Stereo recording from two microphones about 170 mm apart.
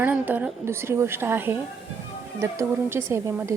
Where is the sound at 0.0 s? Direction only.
10° right (ahead or behind).